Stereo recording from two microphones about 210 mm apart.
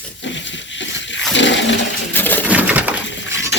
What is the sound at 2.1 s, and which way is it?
Coin, 10° left (ahead or behind).